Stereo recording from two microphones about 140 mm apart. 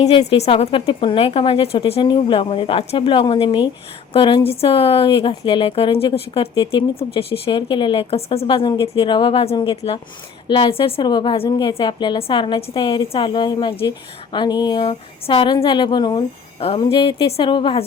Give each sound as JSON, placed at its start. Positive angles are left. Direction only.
{"t": 0.0, "sound": "a woman's voice", "side_deg": 45}